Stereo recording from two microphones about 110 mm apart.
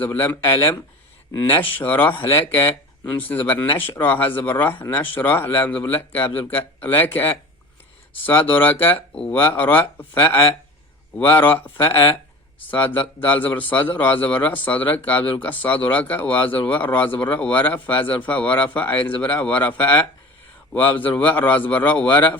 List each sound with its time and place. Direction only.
0.0 s speech: 20° left (ahead or behind)
11.3 s speech: 15° left (ahead or behind)